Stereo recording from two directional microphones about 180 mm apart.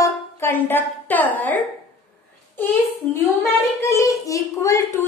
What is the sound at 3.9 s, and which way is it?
A woman's voice, 15° left (ahead or behind).